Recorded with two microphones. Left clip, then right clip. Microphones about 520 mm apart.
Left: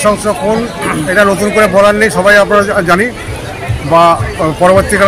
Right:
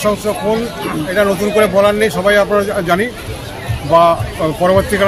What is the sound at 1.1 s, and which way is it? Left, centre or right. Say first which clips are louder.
A man's voice: left 4 dB; right.